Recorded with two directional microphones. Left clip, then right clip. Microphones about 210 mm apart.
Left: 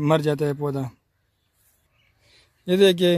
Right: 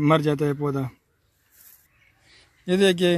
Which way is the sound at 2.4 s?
45° left (ahead or behind).